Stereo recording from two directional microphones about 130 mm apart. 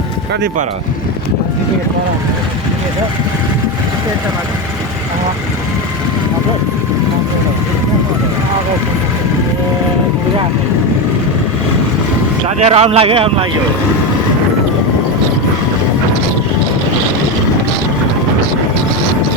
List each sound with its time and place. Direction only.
12.5 s speech: 55° right (ahead or behind)